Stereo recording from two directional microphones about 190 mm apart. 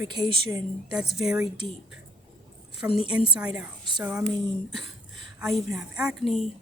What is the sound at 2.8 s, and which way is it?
Speech, 10° right (ahead or behind).